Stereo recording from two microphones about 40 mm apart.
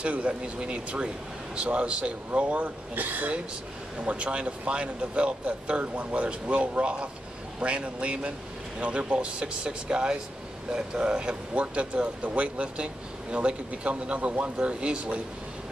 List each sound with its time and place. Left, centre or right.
0.0 s speech: right
3.0 s speech: right
4.0 s speech: right